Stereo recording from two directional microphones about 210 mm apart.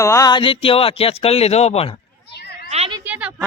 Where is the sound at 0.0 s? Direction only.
15° left (ahead or behind).